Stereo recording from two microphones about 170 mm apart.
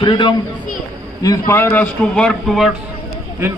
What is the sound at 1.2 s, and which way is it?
A man's voice, 20° left (ahead or behind).